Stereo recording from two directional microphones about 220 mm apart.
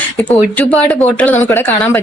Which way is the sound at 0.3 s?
5° left (ahead or behind).